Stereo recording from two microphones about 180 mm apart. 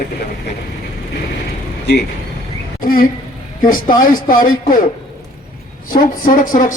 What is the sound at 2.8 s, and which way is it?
Speech, 50° left (ahead or behind).